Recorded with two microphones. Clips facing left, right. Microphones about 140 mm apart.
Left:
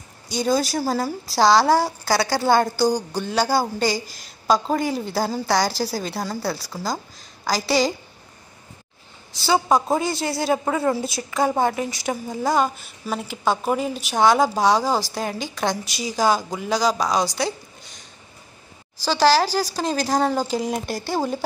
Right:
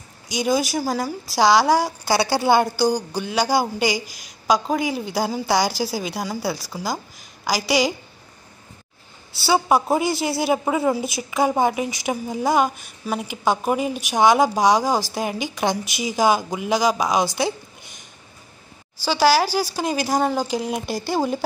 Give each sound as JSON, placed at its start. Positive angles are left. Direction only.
{"t": 0.4, "sound": "a woman's voice", "side_deg": 0}
{"t": 2.0, "sound": "a woman's voice", "side_deg": -25}
{"t": 2.4, "sound": "a woman's voice", "side_deg": -10}
{"t": 9.5, "sound": "a woman's voice", "side_deg": -5}
{"t": 15.1, "sound": "speech", "side_deg": -5}
{"t": 15.5, "sound": "a woman's voice", "side_deg": -20}
{"t": 19.0, "sound": "a woman's voice", "side_deg": -5}